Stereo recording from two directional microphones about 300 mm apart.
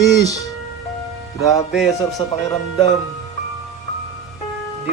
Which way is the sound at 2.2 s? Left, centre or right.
Centre.